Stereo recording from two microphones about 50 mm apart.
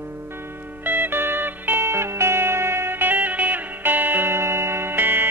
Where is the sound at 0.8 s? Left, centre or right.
Right.